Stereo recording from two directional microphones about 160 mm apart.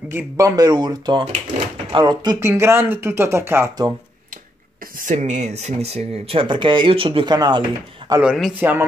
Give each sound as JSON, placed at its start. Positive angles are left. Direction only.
{"t": 0.1, "sound": "speech", "side_deg": -15}
{"t": 2.4, "sound": "speech", "side_deg": -15}
{"t": 4.9, "sound": "speech", "side_deg": -50}
{"t": 8.2, "sound": "speech", "side_deg": -5}